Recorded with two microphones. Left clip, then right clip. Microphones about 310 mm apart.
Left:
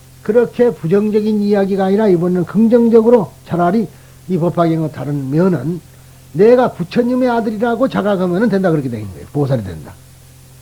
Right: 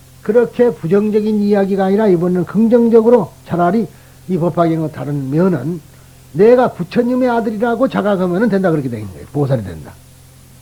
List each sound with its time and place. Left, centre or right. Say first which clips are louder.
0.2 s a man's voice: even; right